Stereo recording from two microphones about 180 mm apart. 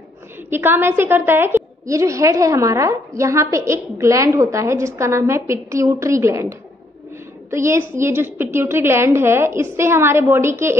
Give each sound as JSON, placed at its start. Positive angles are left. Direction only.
{"t": 0.5, "sound": "a woman's voice", "side_deg": -15}
{"t": 7.5, "sound": "a woman's voice", "side_deg": -15}